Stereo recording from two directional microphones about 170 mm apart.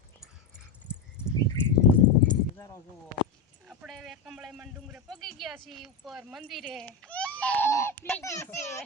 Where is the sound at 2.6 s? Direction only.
20° left (ahead or behind).